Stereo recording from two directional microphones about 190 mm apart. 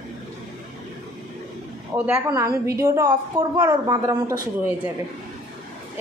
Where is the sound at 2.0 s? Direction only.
10° right (ahead or behind).